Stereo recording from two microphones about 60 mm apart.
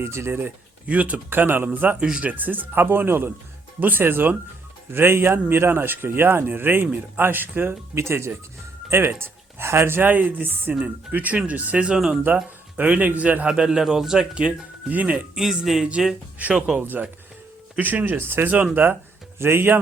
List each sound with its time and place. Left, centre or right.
0.0 s speech: right
0.9 s speech: right
1.3 s speech: right
2.0 s a man's voice: centre
2.3 s speech: right
7.9 s speech: right
11.9 s a man's voice: centre
12.7 s a man's voice: right
15.4 s a man's voice: centre
17.7 s speech: right
18.5 s speech: right
19.4 s speech: right